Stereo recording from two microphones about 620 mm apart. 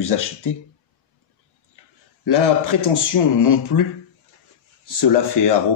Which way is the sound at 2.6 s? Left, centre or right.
Left.